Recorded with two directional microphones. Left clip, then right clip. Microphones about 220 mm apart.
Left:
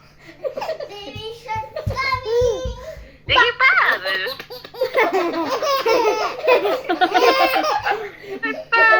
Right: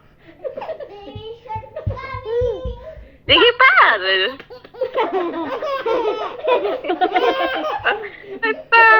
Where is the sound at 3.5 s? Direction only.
25° right (ahead or behind).